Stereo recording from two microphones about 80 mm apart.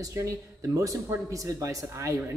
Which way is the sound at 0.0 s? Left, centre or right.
Right.